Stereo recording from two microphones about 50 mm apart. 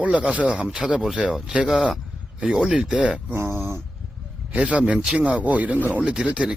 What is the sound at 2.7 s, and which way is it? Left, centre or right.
Speech, right.